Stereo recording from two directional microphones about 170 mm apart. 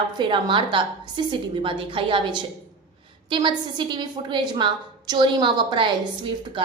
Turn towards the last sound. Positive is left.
turn(degrees=-30)  # may be behind; listen again after turning